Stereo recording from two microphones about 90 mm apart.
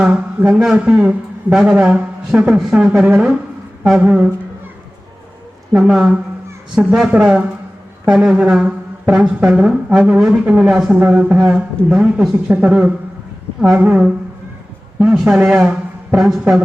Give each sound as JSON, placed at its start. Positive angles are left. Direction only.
{"t": 0.0, "sound": "speech", "side_deg": -10}
{"t": 5.7, "sound": "a man's voice", "side_deg": -10}